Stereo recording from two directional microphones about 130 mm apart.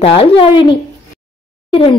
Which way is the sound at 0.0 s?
45° left (ahead or behind).